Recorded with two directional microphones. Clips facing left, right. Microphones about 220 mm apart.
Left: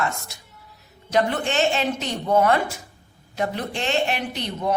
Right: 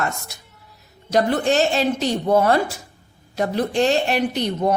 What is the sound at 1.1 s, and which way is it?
A woman's voice, 35° right (ahead or behind).